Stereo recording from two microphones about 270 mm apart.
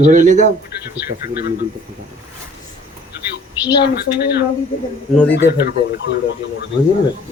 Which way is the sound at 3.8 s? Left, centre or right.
Left.